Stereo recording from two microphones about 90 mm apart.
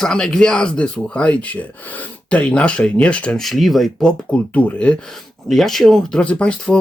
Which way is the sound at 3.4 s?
Centre (ahead or behind).